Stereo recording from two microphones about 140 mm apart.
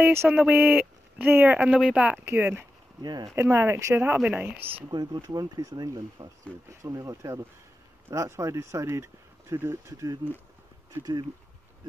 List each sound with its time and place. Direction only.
0.0 s speech: 15° right (ahead or behind)
3.0 s speech: 30° right (ahead or behind)
3.3 s speech: 20° right (ahead or behind)
4.9 s speech: 30° right (ahead or behind)